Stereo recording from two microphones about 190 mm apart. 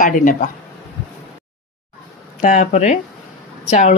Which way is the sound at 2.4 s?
40° left (ahead or behind).